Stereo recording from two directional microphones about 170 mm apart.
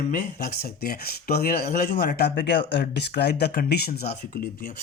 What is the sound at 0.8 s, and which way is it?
Speech, 65° left (ahead or behind).